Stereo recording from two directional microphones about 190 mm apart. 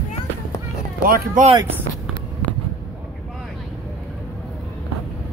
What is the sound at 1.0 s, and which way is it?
Speech, 50° right (ahead or behind).